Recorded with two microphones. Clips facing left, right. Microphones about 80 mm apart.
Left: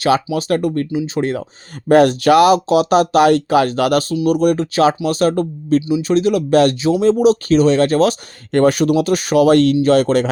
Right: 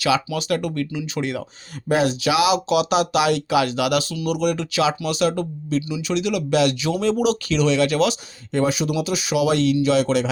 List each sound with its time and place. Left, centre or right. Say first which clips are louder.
0.3 s speech: left 6 dB; left
1.9 s speech: left 9 dB; left
8.5 s speech: left 8 dB; left